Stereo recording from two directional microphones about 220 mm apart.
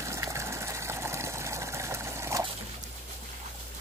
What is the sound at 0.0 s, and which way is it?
Vehicle, 15° right (ahead or behind).